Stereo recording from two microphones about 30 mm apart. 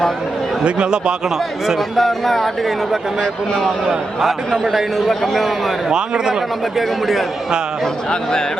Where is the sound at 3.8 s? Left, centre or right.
Centre.